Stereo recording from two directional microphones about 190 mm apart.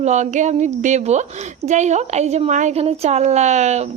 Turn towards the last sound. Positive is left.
turn(degrees=-35)  # may be behind; listen again after turning